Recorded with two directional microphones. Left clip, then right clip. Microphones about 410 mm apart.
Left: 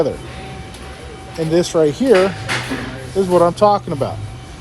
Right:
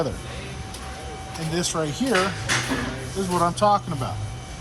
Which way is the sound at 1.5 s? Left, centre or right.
Centre.